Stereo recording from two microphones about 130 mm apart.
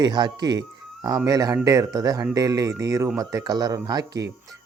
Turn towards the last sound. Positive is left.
turn(degrees=-30)  # may be behind; listen again after turning